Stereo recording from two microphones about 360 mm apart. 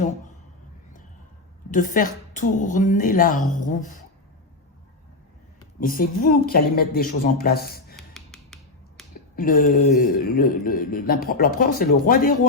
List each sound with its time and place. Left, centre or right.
1.7 s speech: left
5.8 s speech: left
7.9 s music: centre
9.3 s speech: left